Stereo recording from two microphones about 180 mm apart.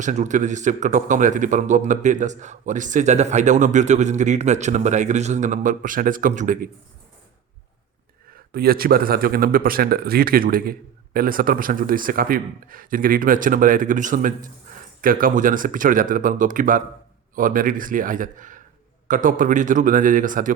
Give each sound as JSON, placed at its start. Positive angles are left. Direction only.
{"t": 0.0, "sound": "speech", "side_deg": -45}
{"t": 8.5, "sound": "speech", "side_deg": -55}